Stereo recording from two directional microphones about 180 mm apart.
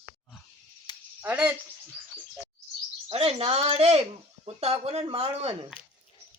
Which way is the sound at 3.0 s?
35° right (ahead or behind).